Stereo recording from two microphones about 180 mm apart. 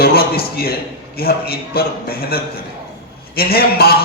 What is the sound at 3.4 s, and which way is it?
Speech, 60° left (ahead or behind).